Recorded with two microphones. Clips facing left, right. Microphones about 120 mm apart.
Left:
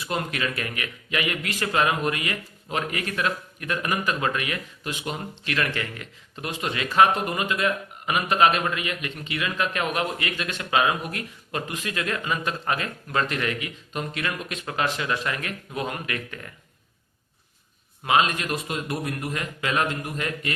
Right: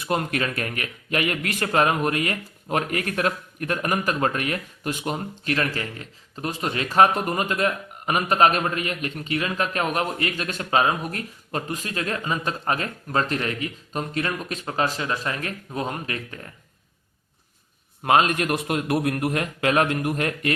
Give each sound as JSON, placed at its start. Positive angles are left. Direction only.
{"t": 0.0, "sound": "a man's voice", "side_deg": -50}
{"t": 18.0, "sound": "a man's voice", "side_deg": -50}